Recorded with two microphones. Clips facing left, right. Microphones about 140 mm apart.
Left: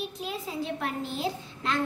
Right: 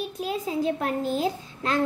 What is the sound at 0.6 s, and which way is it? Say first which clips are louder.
A woman's voice: right 6 dB; 45° right (ahead or behind).